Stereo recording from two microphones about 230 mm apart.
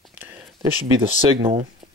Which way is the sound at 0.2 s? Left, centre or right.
Centre.